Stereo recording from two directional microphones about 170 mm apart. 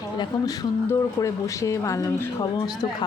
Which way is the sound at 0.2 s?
20° left (ahead or behind).